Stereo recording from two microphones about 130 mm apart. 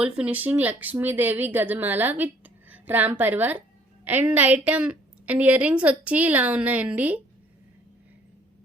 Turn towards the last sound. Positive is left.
turn(degrees=-10)  # may be behind; listen again after turning